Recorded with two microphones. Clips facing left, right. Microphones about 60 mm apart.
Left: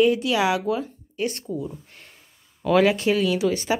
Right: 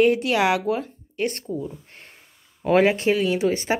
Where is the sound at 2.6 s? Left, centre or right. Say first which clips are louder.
Right 1 dB; right.